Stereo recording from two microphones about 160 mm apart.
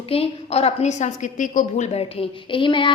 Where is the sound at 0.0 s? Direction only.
35° left (ahead or behind).